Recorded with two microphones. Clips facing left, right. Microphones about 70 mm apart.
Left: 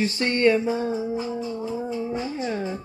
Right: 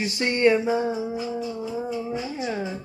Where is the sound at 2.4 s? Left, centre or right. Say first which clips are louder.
Right 1 dB; centre.